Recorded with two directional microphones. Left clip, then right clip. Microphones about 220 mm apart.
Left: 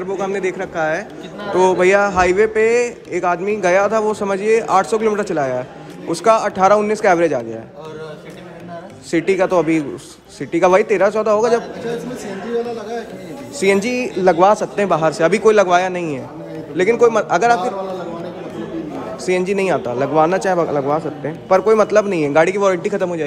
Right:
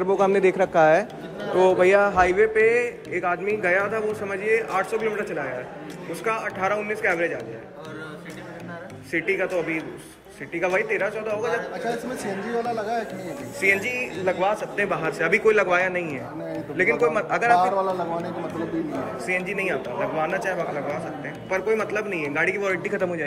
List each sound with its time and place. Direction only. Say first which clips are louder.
0.0 s speech: right 1 dB; 15° right (ahead or behind)
1.6 s a man's voice: left 4 dB; centre (ahead or behind); by 7.3 s 20° left (ahead or behind)
9.1 s a man's voice: left 9 dB; 15° left (ahead or behind)
13.6 s a man's voice: left 6 dB; 15° left (ahead or behind)
19.2 s a man's voice: left 9 dB; 15° left (ahead or behind)